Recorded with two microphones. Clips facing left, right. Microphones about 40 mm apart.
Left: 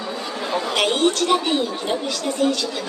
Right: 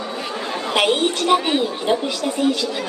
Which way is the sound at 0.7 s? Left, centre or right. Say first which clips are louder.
Right 2 dB; centre.